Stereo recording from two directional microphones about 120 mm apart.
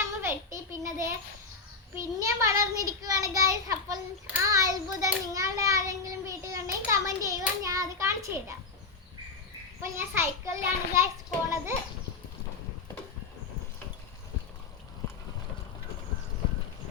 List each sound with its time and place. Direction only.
0.0 s a sound: 20° right (ahead or behind)
2.0 s a child's voice: 30° right (ahead or behind)
9.8 s a child's voice: 20° right (ahead or behind)